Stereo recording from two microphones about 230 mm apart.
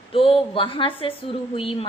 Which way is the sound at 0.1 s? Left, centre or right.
Left.